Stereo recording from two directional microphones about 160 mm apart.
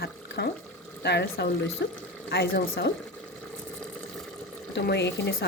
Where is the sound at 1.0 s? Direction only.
90° left.